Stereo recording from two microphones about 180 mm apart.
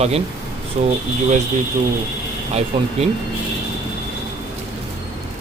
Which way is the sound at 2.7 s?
30° right (ahead or behind).